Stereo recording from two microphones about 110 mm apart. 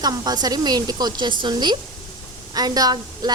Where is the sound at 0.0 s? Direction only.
35° right (ahead or behind).